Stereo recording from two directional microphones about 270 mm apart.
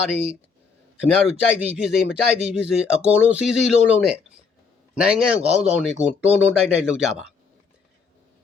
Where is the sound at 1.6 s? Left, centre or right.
Centre.